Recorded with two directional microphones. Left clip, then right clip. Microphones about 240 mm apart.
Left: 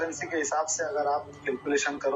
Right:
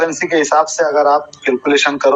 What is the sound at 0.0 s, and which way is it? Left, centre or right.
A man's voice, right.